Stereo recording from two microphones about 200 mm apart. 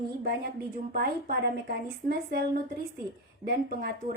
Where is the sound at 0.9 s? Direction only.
45° right (ahead or behind).